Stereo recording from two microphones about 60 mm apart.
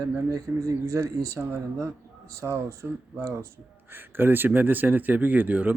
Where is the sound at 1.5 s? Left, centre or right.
Right.